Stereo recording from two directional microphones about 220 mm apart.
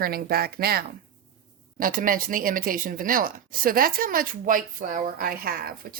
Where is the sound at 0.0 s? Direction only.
45° right (ahead or behind).